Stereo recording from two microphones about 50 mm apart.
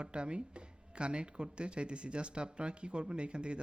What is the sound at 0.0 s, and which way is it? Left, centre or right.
Speech, right.